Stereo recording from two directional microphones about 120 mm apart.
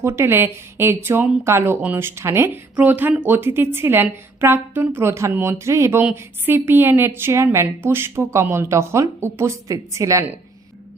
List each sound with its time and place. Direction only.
0.0 s speech: 20° right (ahead or behind)